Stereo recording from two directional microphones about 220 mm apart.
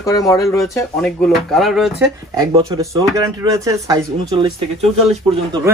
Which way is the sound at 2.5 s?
15° right (ahead or behind).